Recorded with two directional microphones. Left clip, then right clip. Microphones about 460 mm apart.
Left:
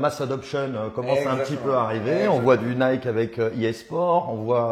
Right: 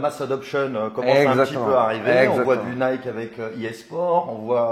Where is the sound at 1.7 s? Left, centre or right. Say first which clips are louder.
Right 1 dB; left.